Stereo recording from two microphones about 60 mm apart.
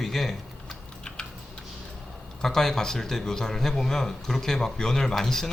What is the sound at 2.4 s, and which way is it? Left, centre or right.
Speech, centre.